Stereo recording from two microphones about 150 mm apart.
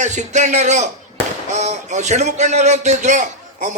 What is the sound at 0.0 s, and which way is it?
A man's voice, 50° right (ahead or behind).